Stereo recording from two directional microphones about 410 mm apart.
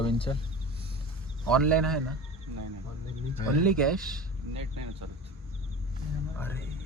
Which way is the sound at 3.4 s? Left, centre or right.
Centre.